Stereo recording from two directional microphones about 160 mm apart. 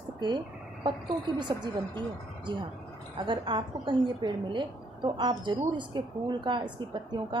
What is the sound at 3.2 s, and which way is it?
A woman's voice, 30° right (ahead or behind).